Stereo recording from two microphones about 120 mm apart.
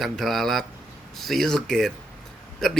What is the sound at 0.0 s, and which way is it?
A man's voice, centre (ahead or behind).